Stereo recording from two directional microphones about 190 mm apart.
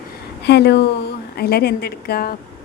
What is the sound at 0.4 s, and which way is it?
A woman's voice, 60° left (ahead or behind).